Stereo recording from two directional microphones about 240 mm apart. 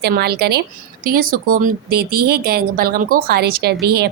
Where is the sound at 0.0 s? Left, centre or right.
Right.